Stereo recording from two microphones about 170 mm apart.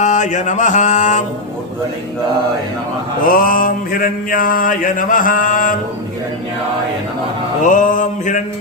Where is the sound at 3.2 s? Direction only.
55° left (ahead or behind).